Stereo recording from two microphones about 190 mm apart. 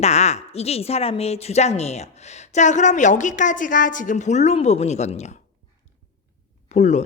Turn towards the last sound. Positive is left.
turn(degrees=40)  # may be behind; listen again after turning